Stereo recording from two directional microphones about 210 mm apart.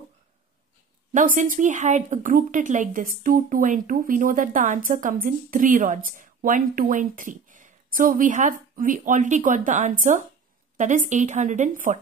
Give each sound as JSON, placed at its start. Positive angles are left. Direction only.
{"t": 1.1, "sound": "speech", "side_deg": -40}